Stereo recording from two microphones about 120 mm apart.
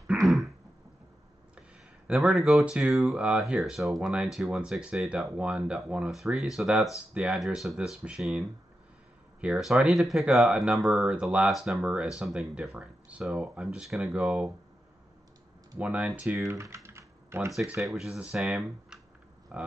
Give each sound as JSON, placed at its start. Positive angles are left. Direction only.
{"t": 0.0, "sound": "throat clearing", "side_deg": 0}
{"t": 2.0, "sound": "speech", "side_deg": -5}
{"t": 15.8, "sound": "speech", "side_deg": -10}
{"t": 16.4, "sound": "typing", "side_deg": -25}
{"t": 17.8, "sound": "speech", "side_deg": 0}